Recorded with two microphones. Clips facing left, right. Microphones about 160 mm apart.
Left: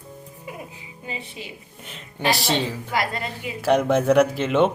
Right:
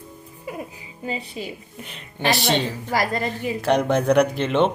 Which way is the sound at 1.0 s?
40° right (ahead or behind).